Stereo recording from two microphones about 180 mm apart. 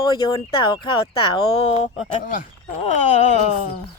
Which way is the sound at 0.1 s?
25° left (ahead or behind).